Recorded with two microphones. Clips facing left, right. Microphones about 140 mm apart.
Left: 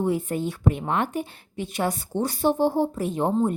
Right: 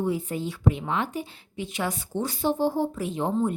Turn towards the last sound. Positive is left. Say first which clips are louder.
# left 3 dB
turn(degrees=45)  # may be behind; listen again after turning